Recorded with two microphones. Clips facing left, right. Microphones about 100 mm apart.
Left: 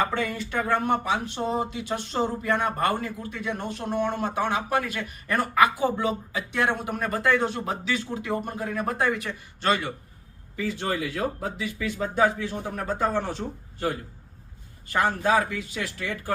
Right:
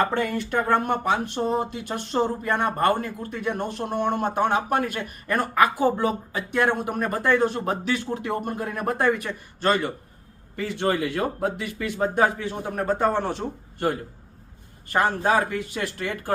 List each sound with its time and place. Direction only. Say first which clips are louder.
0.1 s speech: right 3 dB; 50° right (ahead or behind)
7.5 s speech: right 3 dB; 50° right (ahead or behind)
10.5 s speech: right 4 dB; 60° right (ahead or behind)
14.9 s speech: right 1 dB; 50° right (ahead or behind)